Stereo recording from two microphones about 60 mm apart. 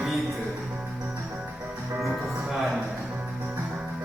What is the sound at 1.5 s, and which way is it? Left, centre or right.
Music, right.